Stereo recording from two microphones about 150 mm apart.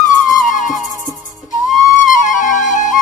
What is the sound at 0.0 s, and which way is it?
Music, 60° left (ahead or behind).